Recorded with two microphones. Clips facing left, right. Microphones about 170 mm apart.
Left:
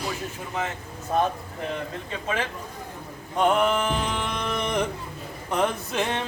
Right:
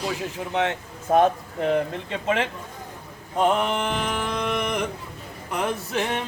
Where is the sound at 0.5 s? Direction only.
75° right (ahead or behind).